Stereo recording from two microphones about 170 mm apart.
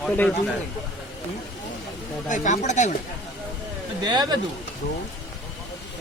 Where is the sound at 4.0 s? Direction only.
25° right (ahead or behind).